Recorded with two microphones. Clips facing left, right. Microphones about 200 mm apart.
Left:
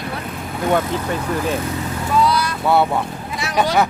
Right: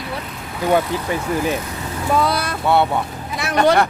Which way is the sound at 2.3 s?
55° right (ahead or behind).